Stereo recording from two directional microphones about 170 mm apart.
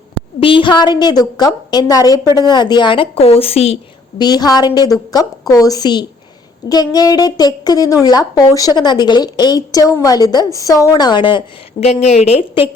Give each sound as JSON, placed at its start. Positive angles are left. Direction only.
{"t": 0.3, "sound": "a woman's voice", "side_deg": 30}
{"t": 4.2, "sound": "a woman's voice", "side_deg": 25}
{"t": 11.8, "sound": "speech", "side_deg": 40}